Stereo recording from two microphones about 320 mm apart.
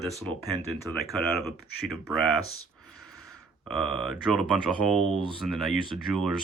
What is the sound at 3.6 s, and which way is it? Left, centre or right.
Speech, centre.